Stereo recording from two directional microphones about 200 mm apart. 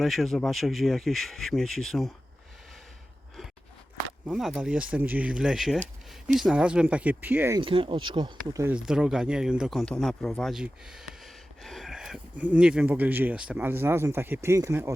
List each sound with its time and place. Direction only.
0.0 s speech: centre (ahead or behind)
4.3 s speech: centre (ahead or behind)
7.6 s speech: 25° right (ahead or behind)
8.7 s speech: 5° right (ahead or behind)